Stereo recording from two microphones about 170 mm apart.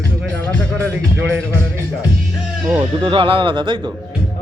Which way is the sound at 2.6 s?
5° right (ahead or behind).